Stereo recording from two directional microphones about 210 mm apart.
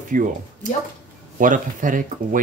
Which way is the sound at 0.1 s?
40° right (ahead or behind).